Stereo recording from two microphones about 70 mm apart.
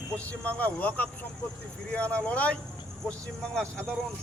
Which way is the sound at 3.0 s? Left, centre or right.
Centre.